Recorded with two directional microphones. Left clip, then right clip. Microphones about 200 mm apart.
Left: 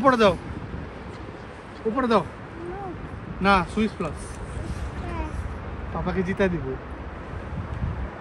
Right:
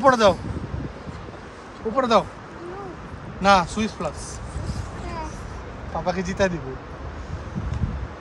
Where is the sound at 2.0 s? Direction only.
35° right (ahead or behind).